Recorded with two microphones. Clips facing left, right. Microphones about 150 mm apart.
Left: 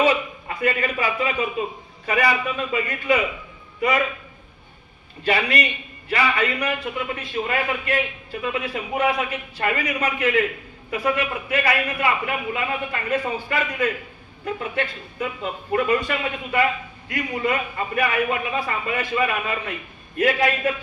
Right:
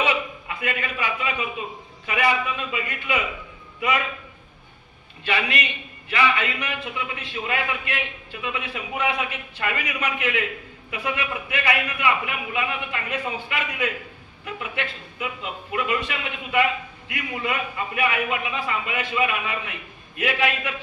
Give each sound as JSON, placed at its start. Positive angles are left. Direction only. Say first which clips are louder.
{"t": 0.0, "sound": "a sound", "louder": "left 5 dB", "side_deg": 40}
{"t": 2.0, "sound": "a man's voice", "louder": "left 2 dB", "side_deg": 35}
{"t": 5.2, "sound": "a man's voice", "louder": "left 4 dB", "side_deg": 40}